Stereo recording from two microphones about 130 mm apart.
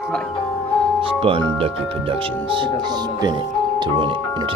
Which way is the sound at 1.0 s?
45° right (ahead or behind).